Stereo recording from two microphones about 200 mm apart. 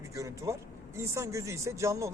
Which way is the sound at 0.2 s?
15° right (ahead or behind).